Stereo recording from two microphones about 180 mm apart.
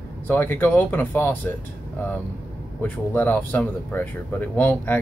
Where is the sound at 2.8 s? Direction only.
10° left (ahead or behind).